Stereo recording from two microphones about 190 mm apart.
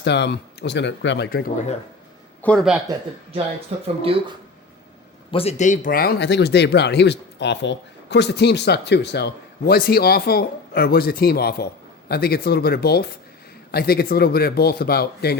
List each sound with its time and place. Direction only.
0.0 s speech: 65° left (ahead or behind)
2.4 s speech: 5° left (ahead or behind)
4.0 s speech: 30° right (ahead or behind)
5.3 s speech: 30° left (ahead or behind); by 15.4 s 55° left (ahead or behind)